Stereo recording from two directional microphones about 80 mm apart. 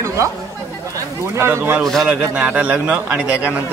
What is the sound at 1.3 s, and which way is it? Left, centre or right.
Speech, right.